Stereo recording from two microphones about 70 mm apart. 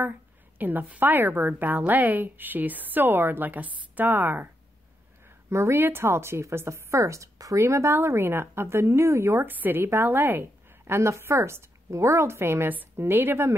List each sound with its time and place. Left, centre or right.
0.6 s a woman's voice: right
5.5 s a woman's voice: right
7.6 s speech: right